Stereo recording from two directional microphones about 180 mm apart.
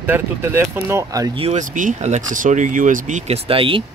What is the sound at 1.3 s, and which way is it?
Speech, 40° right (ahead or behind).